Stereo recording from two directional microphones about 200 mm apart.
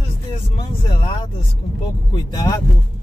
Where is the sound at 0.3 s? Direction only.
25° left (ahead or behind).